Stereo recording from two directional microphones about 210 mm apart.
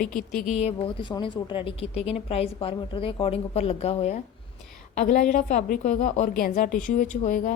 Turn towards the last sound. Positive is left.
turn(degrees=40)  # may be behind; listen again after turning